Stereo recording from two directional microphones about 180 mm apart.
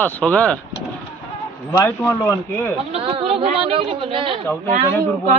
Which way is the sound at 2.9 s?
30° right (ahead or behind).